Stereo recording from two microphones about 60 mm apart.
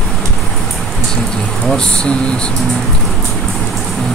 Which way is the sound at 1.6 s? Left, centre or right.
Centre.